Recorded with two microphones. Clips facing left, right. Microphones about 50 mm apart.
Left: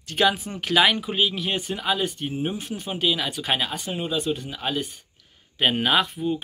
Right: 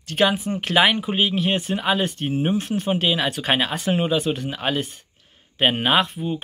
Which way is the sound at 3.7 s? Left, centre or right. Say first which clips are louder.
Right 6 dB; right.